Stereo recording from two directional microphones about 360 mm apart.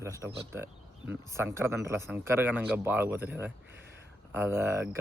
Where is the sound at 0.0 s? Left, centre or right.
Centre.